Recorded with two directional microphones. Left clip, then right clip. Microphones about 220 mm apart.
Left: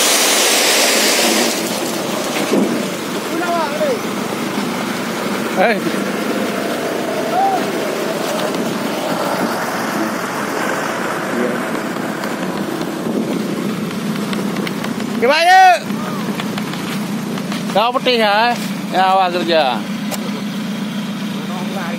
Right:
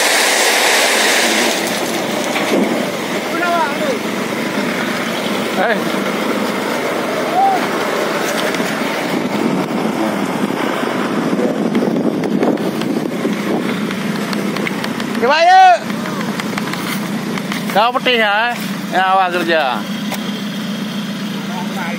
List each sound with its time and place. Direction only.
15.2 s vehicle: 30° left (ahead or behind)
17.7 s speech: 5° left (ahead or behind)